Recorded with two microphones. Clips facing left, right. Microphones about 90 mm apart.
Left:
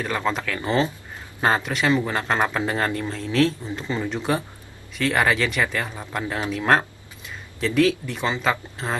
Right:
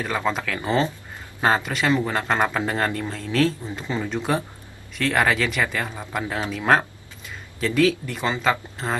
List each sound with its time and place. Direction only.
0.0 s speech: centre (ahead or behind)